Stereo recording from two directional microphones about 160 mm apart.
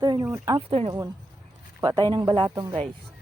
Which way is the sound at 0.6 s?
35° right (ahead or behind).